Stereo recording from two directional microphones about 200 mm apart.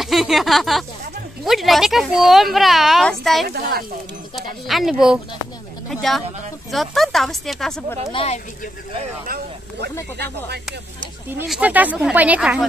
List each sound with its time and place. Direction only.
0.0 s speech: centre (ahead or behind)
8.1 s speech: 25° left (ahead or behind)
10.1 s speech: 55° right (ahead or behind)
11.2 s speech: 5° right (ahead or behind)